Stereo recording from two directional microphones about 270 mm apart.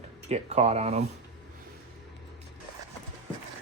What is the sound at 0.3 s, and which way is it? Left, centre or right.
Speech, right.